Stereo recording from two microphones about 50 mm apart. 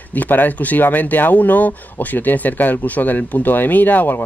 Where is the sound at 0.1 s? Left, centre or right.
Left.